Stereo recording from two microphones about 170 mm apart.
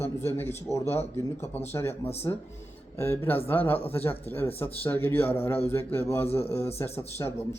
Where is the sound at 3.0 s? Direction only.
15° left (ahead or behind).